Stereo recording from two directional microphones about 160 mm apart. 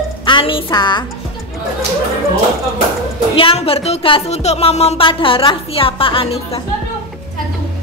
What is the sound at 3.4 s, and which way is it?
Speech, 35° left (ahead or behind).